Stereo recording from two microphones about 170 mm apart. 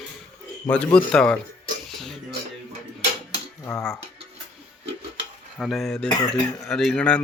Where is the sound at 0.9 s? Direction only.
5° left (ahead or behind).